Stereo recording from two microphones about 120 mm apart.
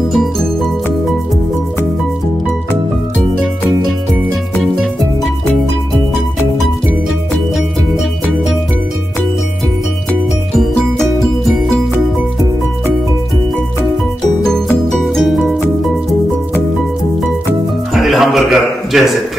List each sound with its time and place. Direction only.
0.1 s music: centre (ahead or behind)
14.9 s music: 5° left (ahead or behind)
17.9 s music: centre (ahead or behind)